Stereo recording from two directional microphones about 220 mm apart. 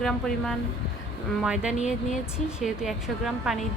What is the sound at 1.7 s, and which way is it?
Speech, 30° left (ahead or behind).